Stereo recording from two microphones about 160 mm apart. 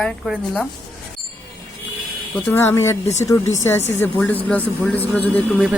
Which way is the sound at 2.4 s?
15° left (ahead or behind).